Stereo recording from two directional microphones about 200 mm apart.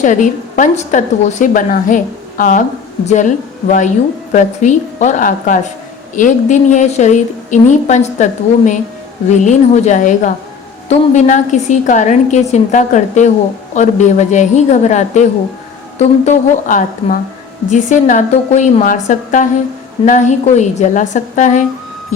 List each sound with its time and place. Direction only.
0.0 s a woman's voice: 40° left (ahead or behind)